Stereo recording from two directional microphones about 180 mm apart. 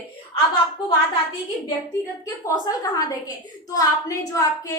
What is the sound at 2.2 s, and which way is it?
A woman's voice, 20° left (ahead or behind).